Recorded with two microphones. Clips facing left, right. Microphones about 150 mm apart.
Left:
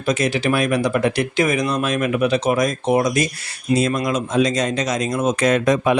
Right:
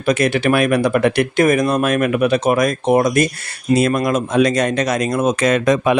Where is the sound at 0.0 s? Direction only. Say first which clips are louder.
Right 4 dB; 60° right (ahead or behind).